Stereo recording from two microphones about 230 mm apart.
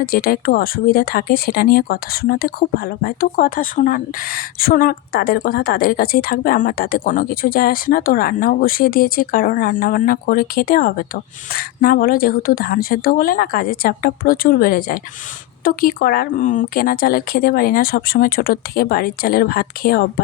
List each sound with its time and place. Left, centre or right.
0.0 s speech: left